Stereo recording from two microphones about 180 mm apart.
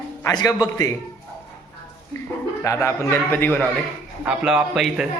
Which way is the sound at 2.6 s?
15° left (ahead or behind).